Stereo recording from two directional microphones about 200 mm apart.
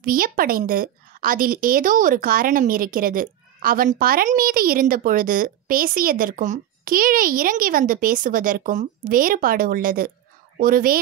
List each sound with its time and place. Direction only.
0.0 s a woman's voice: 45° right (ahead or behind)